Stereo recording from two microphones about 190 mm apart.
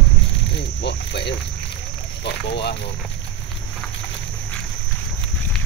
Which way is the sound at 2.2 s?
60° left (ahead or behind).